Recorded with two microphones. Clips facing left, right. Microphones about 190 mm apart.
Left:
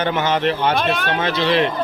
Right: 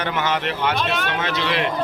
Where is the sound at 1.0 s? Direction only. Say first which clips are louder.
Left 4 dB; 30° left (ahead or behind).